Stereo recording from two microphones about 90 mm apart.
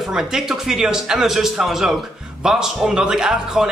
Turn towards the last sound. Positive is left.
turn(degrees=-5)  # may be behind; listen again after turning